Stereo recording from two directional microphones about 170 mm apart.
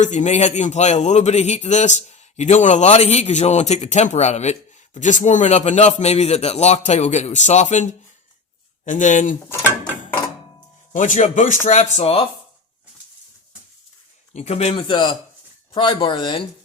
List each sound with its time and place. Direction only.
0.0 s a man's voice: 45° left (ahead or behind)
10.9 s a man's voice: 45° left (ahead or behind)
14.3 s a man's voice: 40° left (ahead or behind)